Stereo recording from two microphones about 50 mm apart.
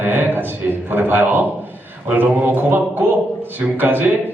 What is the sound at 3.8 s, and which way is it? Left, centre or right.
Speech, right.